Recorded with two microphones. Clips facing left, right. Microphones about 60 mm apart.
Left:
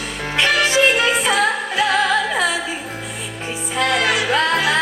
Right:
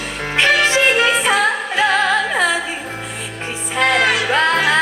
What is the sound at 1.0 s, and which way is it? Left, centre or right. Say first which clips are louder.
Music: right 2 dB; right.